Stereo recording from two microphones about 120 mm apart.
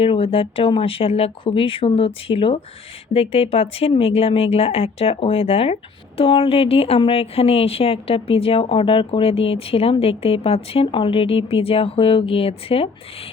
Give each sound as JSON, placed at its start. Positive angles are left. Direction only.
{"t": 0.0, "sound": "speech", "side_deg": 50}